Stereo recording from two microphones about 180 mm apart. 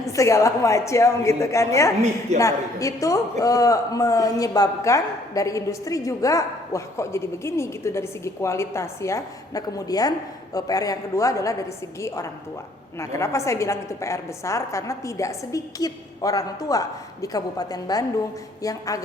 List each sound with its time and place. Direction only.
0.0 s a woman's voice: 15° left (ahead or behind)